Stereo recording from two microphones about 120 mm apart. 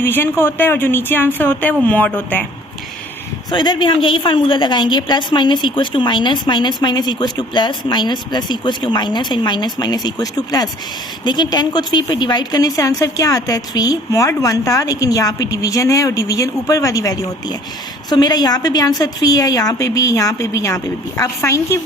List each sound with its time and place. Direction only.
0.0 s a woman's voice: 20° left (ahead or behind)
3.5 s a woman's voice: 40° left (ahead or behind); by 21.8 s 25° left (ahead or behind)